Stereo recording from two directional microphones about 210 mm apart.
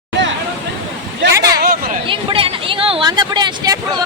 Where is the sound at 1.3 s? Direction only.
15° right (ahead or behind).